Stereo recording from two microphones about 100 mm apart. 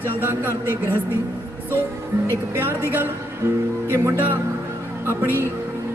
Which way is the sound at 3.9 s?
25° right (ahead or behind).